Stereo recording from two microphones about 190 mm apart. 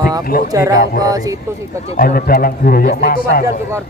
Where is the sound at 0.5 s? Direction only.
15° right (ahead or behind).